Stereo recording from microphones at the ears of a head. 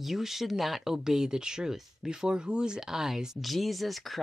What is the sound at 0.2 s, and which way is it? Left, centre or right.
Speech, centre.